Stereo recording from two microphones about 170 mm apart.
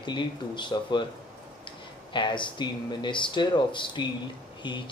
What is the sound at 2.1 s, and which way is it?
Speech, 30° left (ahead or behind).